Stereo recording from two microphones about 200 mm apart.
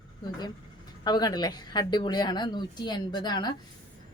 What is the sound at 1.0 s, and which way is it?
A woman's voice, 20° left (ahead or behind).